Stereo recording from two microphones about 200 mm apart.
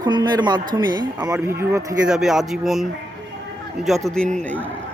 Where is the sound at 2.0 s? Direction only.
Centre (ahead or behind).